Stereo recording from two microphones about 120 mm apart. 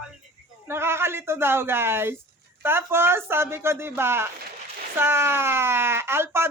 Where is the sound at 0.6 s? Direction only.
20° right (ahead or behind).